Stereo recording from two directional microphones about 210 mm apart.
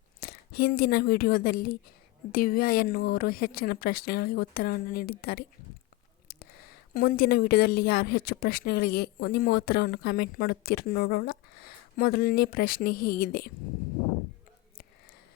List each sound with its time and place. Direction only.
0.2 s speech: 45° left (ahead or behind)